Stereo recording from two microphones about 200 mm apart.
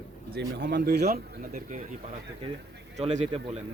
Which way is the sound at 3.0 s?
35° right (ahead or behind).